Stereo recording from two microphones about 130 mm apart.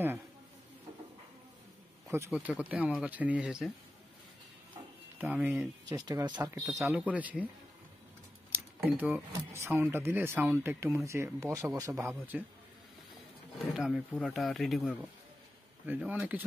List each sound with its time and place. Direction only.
2.0 s speech: 20° right (ahead or behind)
2.3 s speech: 10° right (ahead or behind)
5.2 s speech: 10° right (ahead or behind)
5.9 s speech: 30° right (ahead or behind)
6.7 s speech: 20° right (ahead or behind)
8.8 s speech: 15° right (ahead or behind)
13.7 s speech: 5° right (ahead or behind)